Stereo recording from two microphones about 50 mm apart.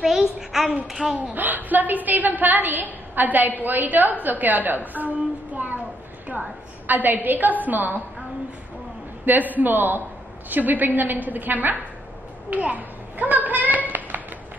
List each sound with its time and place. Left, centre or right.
0.0 s a child's voice: centre
1.3 s a woman's voice: right
6.9 s a woman's voice: right
9.2 s a woman's voice: right
12.4 s a sound: right